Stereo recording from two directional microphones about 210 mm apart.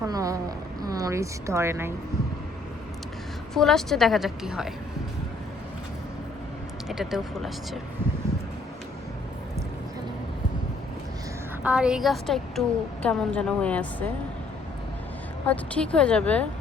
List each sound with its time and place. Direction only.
0.0 s speech: 15° right (ahead or behind)
3.5 s a woman's voice: centre (ahead or behind)
6.8 s a woman's voice: centre (ahead or behind)
11.6 s a woman's voice: 5° right (ahead or behind)
15.4 s a woman's voice: 5° left (ahead or behind)